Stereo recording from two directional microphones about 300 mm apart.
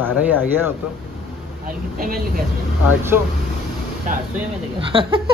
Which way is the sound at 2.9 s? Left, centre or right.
Centre.